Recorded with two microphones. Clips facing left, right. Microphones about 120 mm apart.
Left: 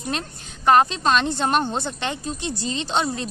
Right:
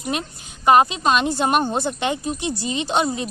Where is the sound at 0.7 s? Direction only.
10° right (ahead or behind).